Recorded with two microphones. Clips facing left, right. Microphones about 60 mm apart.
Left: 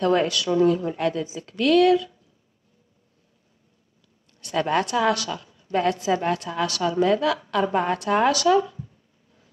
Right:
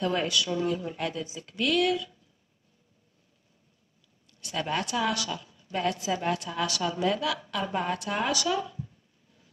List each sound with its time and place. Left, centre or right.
0.0 s a woman's voice: left
4.3 s a woman's voice: left